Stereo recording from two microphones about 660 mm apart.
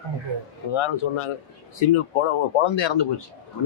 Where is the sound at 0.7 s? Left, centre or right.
Left.